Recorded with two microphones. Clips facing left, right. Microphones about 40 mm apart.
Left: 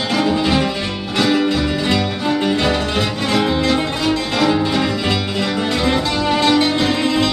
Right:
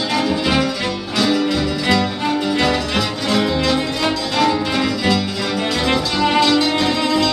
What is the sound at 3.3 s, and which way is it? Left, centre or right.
Music, centre.